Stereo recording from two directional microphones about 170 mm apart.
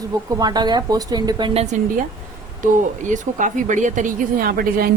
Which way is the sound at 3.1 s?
45° right (ahead or behind).